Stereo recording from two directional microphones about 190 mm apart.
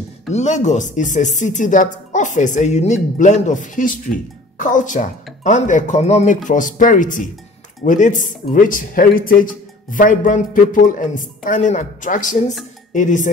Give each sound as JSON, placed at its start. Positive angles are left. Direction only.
{"t": 0.3, "sound": "speech", "side_deg": 35}